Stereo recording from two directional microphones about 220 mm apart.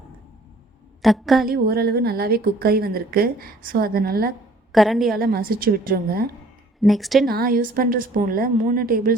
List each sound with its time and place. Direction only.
1.0 s a woman's voice: centre (ahead or behind)
1.5 s a woman's voice: 45° right (ahead or behind)
4.7 s a woman's voice: centre (ahead or behind)
5.2 s a woman's voice: 40° right (ahead or behind)
6.8 s a woman's voice: centre (ahead or behind)
7.3 s a woman's voice: 40° right (ahead or behind)